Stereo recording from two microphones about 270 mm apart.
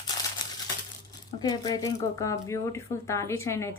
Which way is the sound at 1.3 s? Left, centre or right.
Centre.